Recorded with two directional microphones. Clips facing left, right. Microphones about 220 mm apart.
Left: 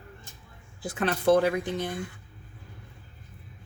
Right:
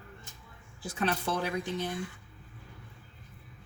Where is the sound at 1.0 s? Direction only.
55° left (ahead or behind).